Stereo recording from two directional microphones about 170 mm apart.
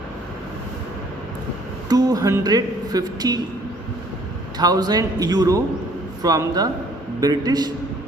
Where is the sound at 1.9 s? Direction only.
20° right (ahead or behind).